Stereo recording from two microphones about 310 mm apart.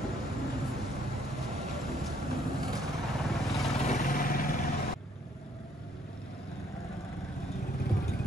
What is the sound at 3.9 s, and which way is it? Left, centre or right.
Vehicle, left.